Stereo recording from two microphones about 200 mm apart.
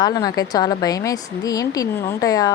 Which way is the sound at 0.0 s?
20° left (ahead or behind).